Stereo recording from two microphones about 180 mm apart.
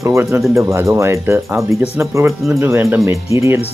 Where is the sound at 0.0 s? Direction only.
15° right (ahead or behind).